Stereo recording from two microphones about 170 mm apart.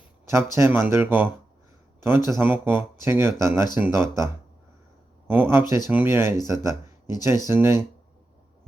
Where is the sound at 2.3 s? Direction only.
10° right (ahead or behind).